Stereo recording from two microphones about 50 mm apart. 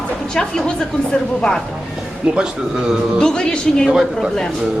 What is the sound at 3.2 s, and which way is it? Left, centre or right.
Speech, centre.